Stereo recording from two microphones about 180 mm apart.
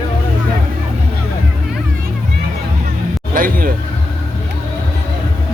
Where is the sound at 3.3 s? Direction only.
50° right (ahead or behind).